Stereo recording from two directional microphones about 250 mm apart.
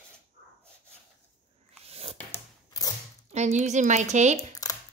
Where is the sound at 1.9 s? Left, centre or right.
Right.